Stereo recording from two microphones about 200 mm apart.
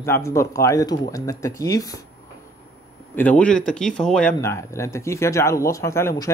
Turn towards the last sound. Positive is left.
turn(degrees=15)  # may be behind; listen again after turning